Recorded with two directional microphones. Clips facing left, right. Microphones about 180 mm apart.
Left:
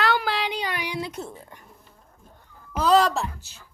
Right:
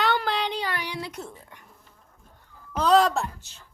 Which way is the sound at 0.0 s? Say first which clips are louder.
Left 1 dB; 5° left (ahead or behind).